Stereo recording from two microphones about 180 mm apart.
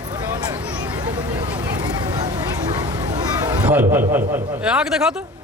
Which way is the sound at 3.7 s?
10° right (ahead or behind).